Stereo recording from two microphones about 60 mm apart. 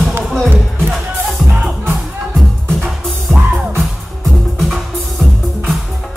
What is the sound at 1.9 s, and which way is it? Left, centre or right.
Music, centre.